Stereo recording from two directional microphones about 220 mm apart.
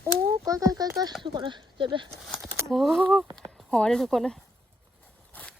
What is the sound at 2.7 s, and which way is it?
Speech, centre (ahead or behind).